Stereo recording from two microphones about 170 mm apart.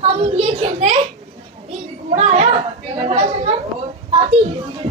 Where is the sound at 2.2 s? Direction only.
40° right (ahead or behind).